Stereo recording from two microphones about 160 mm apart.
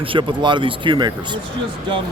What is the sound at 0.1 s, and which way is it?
Speech, 30° right (ahead or behind).